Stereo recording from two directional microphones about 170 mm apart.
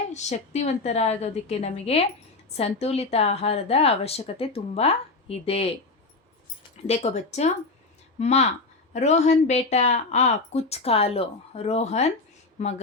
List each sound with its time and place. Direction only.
0.1 s speech: 40° left (ahead or behind)
6.8 s speech: 40° left (ahead or behind)